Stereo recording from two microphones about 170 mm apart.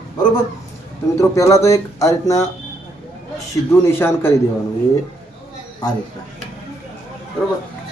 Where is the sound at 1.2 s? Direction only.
15° left (ahead or behind).